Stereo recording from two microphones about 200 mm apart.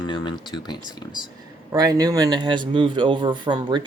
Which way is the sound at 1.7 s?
20° right (ahead or behind).